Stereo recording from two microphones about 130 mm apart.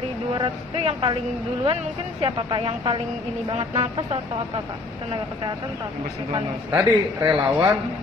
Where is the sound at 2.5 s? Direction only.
40° right (ahead or behind).